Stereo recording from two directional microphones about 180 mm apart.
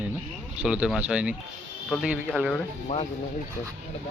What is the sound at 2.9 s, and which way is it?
Speech, 40° left (ahead or behind).